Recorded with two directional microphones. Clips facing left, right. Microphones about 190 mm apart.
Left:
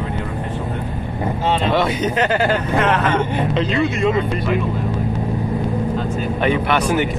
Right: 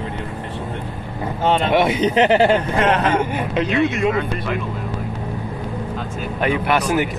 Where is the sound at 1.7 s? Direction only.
15° right (ahead or behind).